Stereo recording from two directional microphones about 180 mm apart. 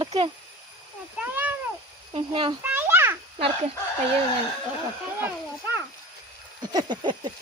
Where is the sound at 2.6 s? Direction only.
10° right (ahead or behind).